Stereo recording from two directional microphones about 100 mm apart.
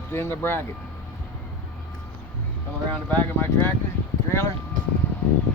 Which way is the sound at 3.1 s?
20° left (ahead or behind).